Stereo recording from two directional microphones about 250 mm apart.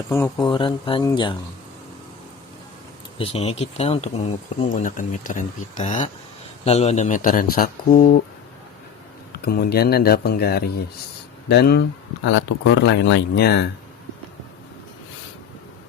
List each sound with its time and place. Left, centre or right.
0.1 s speech: centre
0.4 s speech: centre
3.2 s a man's voice: left
9.3 s a man's voice: left